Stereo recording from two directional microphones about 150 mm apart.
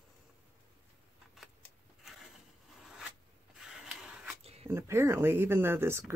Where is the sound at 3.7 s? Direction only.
5° right (ahead or behind).